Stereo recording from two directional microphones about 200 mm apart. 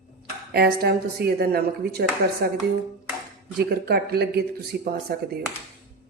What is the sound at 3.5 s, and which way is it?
Speech, 50° right (ahead or behind).